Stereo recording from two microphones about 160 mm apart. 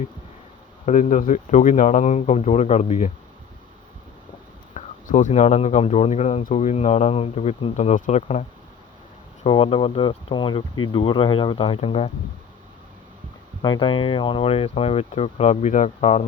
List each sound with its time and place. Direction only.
0.9 s speech: 50° left (ahead or behind)
4.7 s speech: 50° left (ahead or behind)
13.6 s speech: 30° left (ahead or behind); by 16.2 s 45° left (ahead or behind)